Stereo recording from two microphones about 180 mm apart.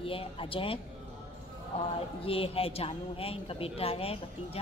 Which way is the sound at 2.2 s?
30° left (ahead or behind).